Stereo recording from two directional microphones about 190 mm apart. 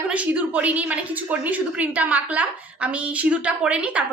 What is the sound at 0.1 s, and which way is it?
A woman's voice, 5° right (ahead or behind).